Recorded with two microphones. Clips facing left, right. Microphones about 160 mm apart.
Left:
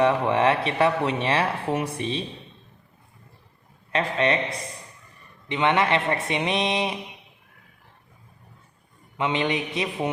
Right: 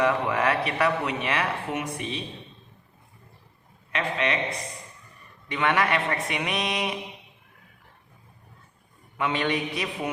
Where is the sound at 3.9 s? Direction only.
35° left (ahead or behind).